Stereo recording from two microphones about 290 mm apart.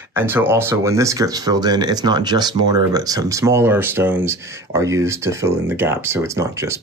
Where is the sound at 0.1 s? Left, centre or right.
Centre.